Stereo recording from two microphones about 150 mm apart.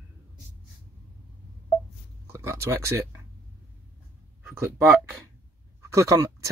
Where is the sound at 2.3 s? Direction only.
20° right (ahead or behind).